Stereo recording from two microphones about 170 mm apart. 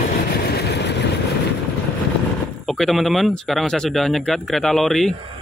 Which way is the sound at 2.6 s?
Centre (ahead or behind).